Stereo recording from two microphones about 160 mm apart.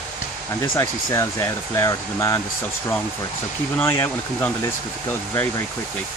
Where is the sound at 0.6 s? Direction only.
20° left (ahead or behind).